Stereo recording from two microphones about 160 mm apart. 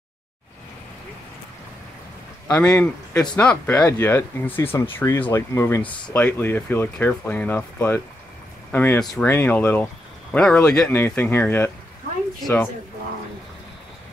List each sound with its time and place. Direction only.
2.4 s speech: 5° left (ahead or behind)